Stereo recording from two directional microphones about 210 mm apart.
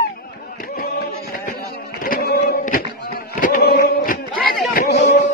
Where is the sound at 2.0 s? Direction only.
45° left (ahead or behind).